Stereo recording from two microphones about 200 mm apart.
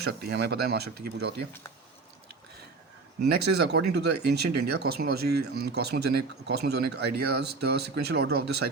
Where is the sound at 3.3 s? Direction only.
55° right (ahead or behind).